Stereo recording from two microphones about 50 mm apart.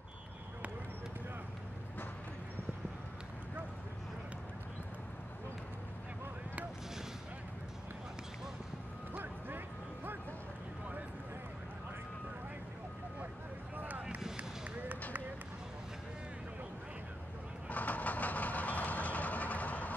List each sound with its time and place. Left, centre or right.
9.1 s music: right
13.7 s a sound: right
17.6 s vehicle: left